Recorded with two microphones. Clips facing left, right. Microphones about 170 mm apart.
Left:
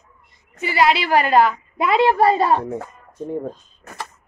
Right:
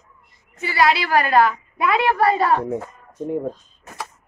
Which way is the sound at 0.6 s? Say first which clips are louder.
Left 1 dB; 20° left (ahead or behind).